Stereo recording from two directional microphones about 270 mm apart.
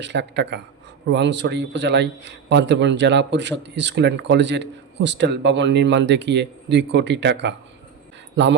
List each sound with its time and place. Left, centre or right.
0.0 s a man's voice: right